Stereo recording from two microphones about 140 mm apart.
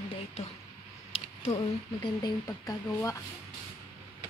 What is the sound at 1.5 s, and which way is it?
A woman's voice, 30° left (ahead or behind).